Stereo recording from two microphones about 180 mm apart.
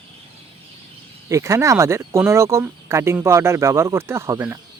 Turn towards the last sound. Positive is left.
turn(degrees=-15)  # may be behind; listen again after turning